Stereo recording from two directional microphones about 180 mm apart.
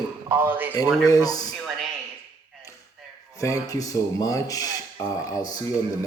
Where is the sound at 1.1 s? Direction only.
20° left (ahead or behind).